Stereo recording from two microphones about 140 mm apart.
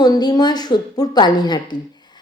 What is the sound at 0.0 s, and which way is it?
A woman's voice, 30° left (ahead or behind).